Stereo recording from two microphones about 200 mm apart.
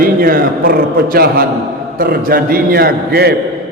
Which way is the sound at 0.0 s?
45° right (ahead or behind).